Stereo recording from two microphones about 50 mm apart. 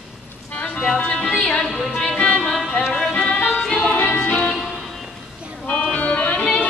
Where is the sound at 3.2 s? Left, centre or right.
Left.